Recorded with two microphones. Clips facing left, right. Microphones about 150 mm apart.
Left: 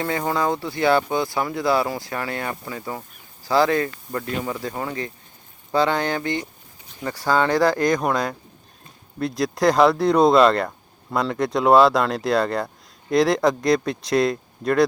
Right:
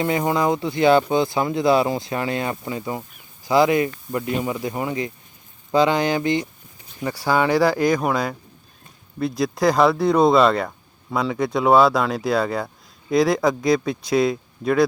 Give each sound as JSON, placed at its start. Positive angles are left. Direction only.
{"t": 0.0, "sound": "speech", "side_deg": -20}